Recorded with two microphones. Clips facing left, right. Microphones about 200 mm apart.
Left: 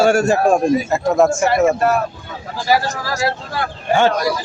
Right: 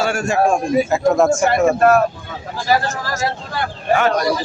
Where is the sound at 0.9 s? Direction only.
Centre (ahead or behind).